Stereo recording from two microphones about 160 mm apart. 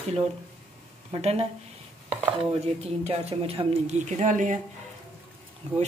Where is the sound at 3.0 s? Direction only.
40° right (ahead or behind).